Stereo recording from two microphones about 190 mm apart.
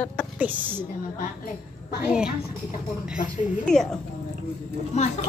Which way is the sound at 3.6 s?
5° left (ahead or behind).